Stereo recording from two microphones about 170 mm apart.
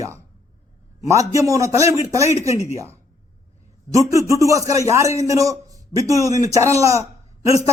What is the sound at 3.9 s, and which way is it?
A man's voice, 20° right (ahead or behind).